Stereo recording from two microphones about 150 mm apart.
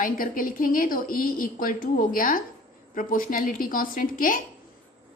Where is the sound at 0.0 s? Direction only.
70° left (ahead or behind).